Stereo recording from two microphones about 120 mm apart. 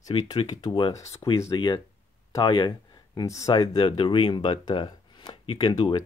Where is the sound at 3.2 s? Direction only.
25° left (ahead or behind).